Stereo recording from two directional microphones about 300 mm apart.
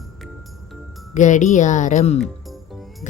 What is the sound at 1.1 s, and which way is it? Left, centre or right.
Speech, left.